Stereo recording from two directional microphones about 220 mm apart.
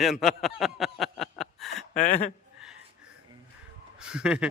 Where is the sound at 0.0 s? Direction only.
Centre (ahead or behind).